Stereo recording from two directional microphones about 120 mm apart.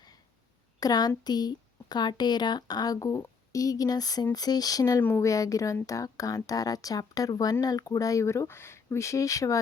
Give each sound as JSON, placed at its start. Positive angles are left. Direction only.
{"t": 0.8, "sound": "a woman's voice", "side_deg": 35}